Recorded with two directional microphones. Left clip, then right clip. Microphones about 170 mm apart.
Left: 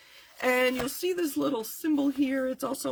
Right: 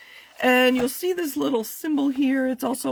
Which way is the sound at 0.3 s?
50° right (ahead or behind).